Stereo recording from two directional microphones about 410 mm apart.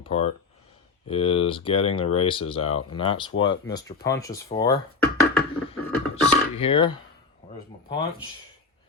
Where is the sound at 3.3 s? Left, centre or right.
Left.